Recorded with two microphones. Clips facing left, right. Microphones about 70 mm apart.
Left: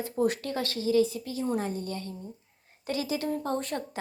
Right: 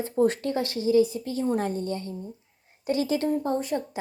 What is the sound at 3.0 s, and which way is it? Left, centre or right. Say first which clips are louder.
Speech: right 5 dB; right.